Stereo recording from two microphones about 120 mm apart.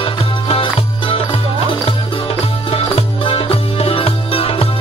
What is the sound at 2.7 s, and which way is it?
Music, 50° left (ahead or behind).